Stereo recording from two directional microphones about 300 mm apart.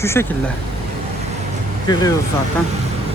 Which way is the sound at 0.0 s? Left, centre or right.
Centre.